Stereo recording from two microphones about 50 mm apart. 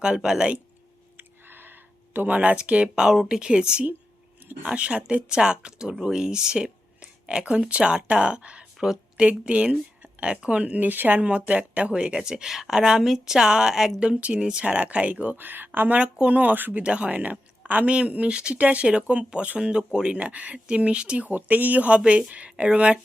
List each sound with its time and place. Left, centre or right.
0.0 s speech: centre
1.1 s a sound: right
2.1 s speech: right; by 14.0 s centre
14.0 s speech: right
15.4 s speech: right
16.1 s speech: right
16.8 s speech: right
21.2 s speech: right